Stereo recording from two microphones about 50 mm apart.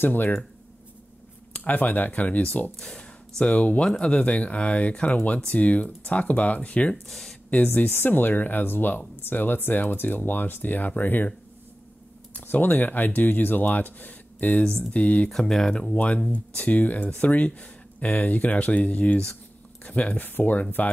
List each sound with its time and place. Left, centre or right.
0.0 s speech: left
1.5 s speech: left
2.8 s speech: centre
7.1 s speech: centre
7.5 s speech: left
12.4 s speech: left
14.6 s speech: centre
14.9 s speech: left
15.2 s speech: centre
15.9 s speech: left